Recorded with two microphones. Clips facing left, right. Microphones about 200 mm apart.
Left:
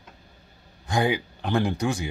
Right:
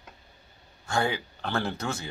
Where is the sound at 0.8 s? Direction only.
15° left (ahead or behind).